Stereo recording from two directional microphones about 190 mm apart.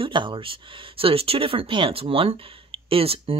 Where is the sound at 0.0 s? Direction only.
25° right (ahead or behind).